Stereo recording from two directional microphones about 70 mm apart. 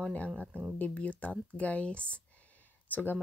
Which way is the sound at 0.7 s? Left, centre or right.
Left.